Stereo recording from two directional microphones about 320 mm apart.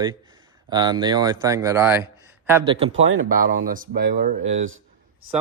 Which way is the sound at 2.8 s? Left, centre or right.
Right.